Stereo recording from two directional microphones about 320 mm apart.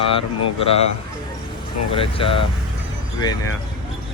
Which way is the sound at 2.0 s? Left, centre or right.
Centre.